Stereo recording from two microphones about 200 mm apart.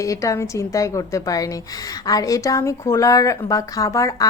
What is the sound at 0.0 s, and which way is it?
A woman's voice, 15° left (ahead or behind).